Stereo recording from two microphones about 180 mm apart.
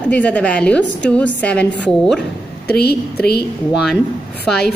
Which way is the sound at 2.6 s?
60° left (ahead or behind).